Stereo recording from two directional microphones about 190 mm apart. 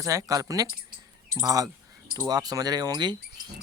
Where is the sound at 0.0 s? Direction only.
15° right (ahead or behind).